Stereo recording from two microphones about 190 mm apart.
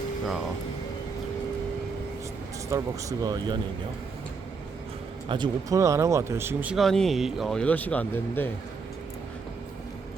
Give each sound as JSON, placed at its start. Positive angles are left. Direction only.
{"t": 2.6, "sound": "speech", "side_deg": -15}
{"t": 5.3, "sound": "speech", "side_deg": -20}